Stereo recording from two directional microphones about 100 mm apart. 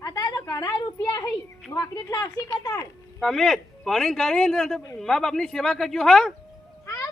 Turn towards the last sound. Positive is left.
turn(degrees=35)  # may be behind; listen again after turning